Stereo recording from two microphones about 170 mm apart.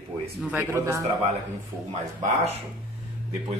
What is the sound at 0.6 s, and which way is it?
Speech, 15° right (ahead or behind).